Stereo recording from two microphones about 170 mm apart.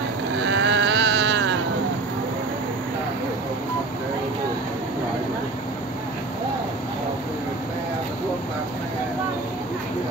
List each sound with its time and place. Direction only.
0.4 s motorboat: 90° right